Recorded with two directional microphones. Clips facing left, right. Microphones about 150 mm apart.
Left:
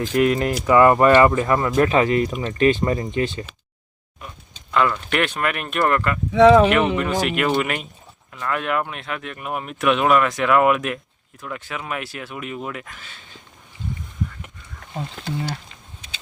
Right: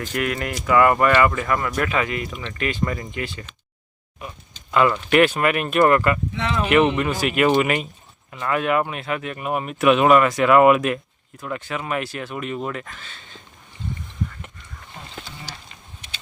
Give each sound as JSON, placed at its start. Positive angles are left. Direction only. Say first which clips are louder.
{"t": 0.1, "sound": "speech", "louder": "left 8 dB", "side_deg": 25}
{"t": 4.7, "sound": "speech", "louder": "right 3 dB", "side_deg": -5}
{"t": 15.2, "sound": "speech", "louder": "left 14 dB", "side_deg": 65}